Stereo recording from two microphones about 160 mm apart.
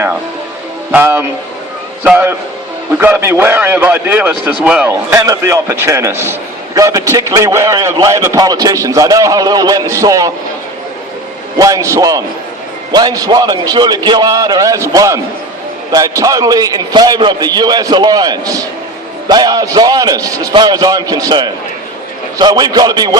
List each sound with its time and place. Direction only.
0.9 s a man's voice: 15° right (ahead or behind)
11.5 s a man's voice: 20° right (ahead or behind)